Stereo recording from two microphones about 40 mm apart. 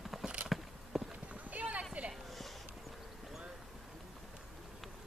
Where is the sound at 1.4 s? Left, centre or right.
Right.